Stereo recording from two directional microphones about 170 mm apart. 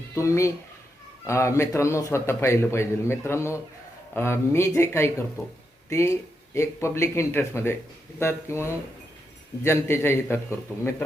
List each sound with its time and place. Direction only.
0.1 s a man's voice: 15° left (ahead or behind)